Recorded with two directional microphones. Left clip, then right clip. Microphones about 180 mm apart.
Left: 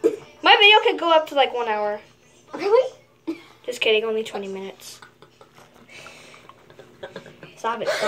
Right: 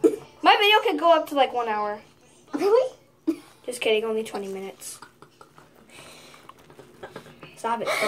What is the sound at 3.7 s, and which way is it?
Speech, 10° right (ahead or behind).